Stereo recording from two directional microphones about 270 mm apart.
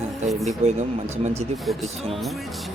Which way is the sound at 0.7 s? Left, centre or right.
Right.